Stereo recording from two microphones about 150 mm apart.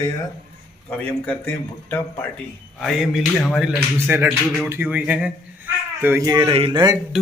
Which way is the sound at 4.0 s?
15° right (ahead or behind).